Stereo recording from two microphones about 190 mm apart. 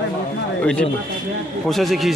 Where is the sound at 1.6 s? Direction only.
Centre (ahead or behind).